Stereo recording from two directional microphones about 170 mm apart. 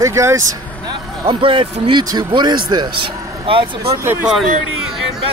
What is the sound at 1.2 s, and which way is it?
A man's voice, 30° right (ahead or behind).